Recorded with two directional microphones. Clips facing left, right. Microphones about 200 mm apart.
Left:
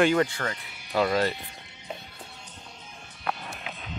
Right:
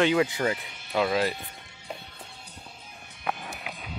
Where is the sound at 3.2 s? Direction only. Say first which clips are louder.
Even; 10° right (ahead or behind).